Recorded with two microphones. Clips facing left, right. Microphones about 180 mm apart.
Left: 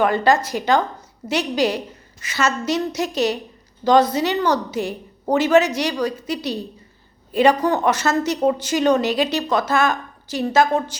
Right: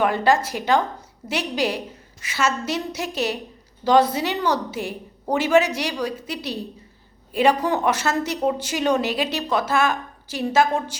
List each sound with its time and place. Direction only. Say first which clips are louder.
0.0 s a woman's voice: left 2 dB; 5° right (ahead or behind)